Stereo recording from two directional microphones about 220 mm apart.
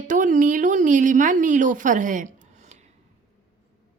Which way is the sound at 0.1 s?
35° right (ahead or behind).